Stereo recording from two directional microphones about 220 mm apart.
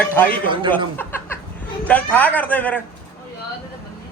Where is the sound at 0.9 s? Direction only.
10° left (ahead or behind).